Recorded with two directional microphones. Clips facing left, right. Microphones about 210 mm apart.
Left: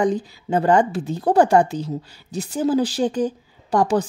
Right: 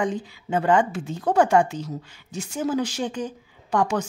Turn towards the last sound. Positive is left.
turn(degrees=35)  # may be behind; listen again after turning